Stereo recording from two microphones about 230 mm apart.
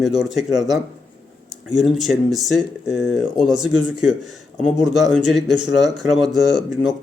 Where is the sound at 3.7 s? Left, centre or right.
Right.